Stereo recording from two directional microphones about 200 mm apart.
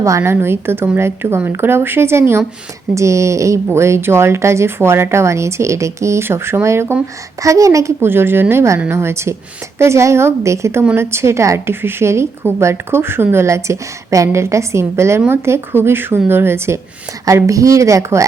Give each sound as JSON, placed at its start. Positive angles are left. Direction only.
{"t": 0.0, "sound": "a woman's voice", "side_deg": -15}